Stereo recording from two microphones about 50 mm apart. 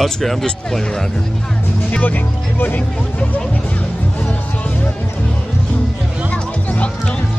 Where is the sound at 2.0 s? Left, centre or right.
Left.